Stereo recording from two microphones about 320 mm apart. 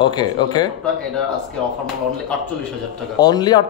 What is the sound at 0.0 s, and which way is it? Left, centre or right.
Speech, centre.